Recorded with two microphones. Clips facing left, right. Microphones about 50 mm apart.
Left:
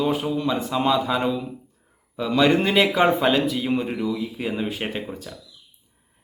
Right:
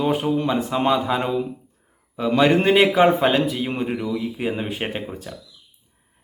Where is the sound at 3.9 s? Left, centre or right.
Centre.